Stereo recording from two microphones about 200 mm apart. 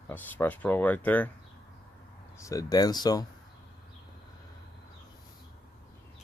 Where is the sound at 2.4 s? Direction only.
15° left (ahead or behind).